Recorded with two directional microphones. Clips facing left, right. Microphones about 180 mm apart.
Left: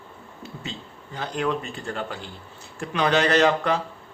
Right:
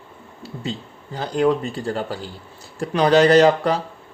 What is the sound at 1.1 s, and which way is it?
Speech, 35° right (ahead or behind).